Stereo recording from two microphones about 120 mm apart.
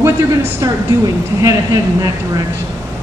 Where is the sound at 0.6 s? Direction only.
30° right (ahead or behind).